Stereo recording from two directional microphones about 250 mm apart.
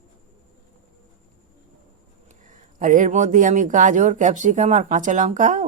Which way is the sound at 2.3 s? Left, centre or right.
Right.